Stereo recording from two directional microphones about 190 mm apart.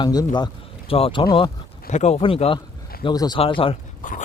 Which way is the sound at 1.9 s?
35° left (ahead or behind).